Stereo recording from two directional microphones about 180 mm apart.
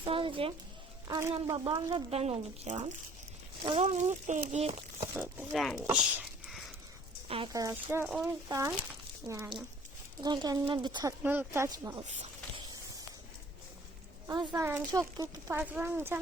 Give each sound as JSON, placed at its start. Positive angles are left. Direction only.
{"t": 0.0, "sound": "speech", "side_deg": -30}
{"t": 5.1, "sound": "speech", "side_deg": -10}
{"t": 5.8, "sound": "a sound", "side_deg": -10}
{"t": 7.3, "sound": "speech", "side_deg": -30}
{"t": 7.5, "sound": "speech", "side_deg": -15}
{"t": 11.2, "sound": "speech", "side_deg": -10}
{"t": 11.9, "sound": "a sound", "side_deg": -35}
{"t": 14.3, "sound": "speech", "side_deg": -20}